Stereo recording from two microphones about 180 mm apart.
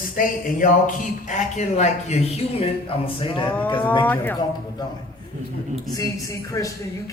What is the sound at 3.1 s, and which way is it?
Music, 30° left (ahead or behind).